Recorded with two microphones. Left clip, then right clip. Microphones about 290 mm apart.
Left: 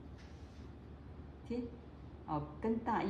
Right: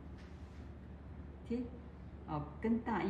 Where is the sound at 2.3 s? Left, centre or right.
Centre.